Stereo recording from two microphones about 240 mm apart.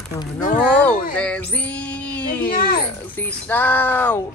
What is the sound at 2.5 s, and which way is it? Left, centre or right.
Speech, left.